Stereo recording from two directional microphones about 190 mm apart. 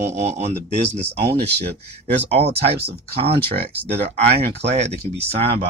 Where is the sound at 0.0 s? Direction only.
35° right (ahead or behind).